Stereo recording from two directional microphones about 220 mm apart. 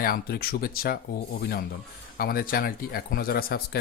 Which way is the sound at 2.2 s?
45° left (ahead or behind).